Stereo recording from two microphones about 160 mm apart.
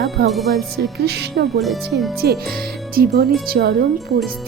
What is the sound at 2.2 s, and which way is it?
Speech, 75° right (ahead or behind).